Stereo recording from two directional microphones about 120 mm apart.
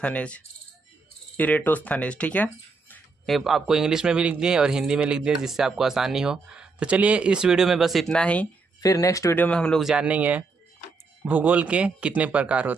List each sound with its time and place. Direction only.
0.0 s speech: 10° left (ahead or behind)
3.3 s a man's voice: centre (ahead or behind)
8.8 s speech: 30° left (ahead or behind)
9.4 s speech: 10° left (ahead or behind)
9.8 s speech: 10° right (ahead or behind)